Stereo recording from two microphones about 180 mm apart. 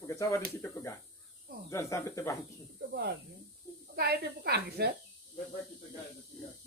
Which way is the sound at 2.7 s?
60° right (ahead or behind).